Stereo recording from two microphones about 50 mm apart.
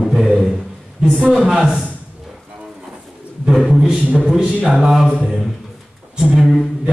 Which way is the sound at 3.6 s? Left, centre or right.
Centre.